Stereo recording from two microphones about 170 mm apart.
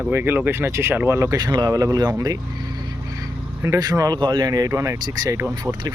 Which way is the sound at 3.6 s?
20° right (ahead or behind).